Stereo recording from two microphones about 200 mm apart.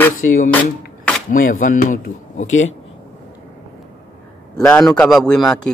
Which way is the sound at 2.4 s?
80° left.